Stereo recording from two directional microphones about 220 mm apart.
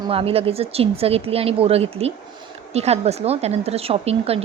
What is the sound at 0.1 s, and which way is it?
A woman's voice, 25° right (ahead or behind).